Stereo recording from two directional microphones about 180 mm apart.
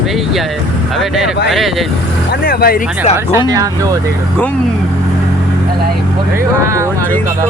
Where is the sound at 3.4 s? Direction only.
20° right (ahead or behind).